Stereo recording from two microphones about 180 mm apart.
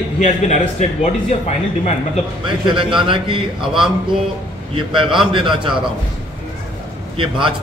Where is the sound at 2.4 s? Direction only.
25° right (ahead or behind).